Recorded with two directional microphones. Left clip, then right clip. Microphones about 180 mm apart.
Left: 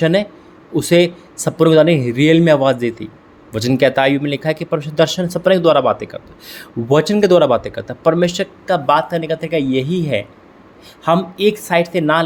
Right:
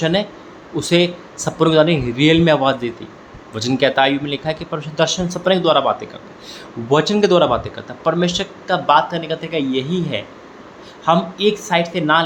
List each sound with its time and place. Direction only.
0.0 s speech: 55° left (ahead or behind)